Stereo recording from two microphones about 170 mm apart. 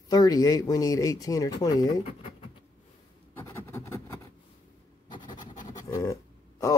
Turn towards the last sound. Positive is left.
turn(degrees=20)  # may be behind; listen again after turning